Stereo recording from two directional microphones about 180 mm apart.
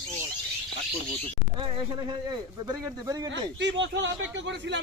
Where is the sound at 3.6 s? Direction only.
75° right (ahead or behind).